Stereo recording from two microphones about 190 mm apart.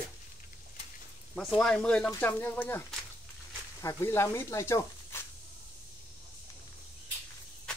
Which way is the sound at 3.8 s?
15° left (ahead or behind).